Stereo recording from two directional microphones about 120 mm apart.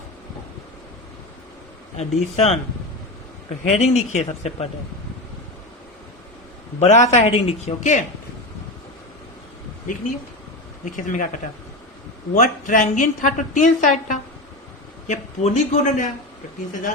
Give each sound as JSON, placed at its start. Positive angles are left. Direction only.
{"t": 2.0, "sound": "speech", "side_deg": 60}
{"t": 3.6, "sound": "a man's voice", "side_deg": 70}
{"t": 6.7, "sound": "a man's voice", "side_deg": 70}
{"t": 10.8, "sound": "a woman's voice", "side_deg": 90}
{"t": 12.3, "sound": "a woman's voice", "side_deg": 90}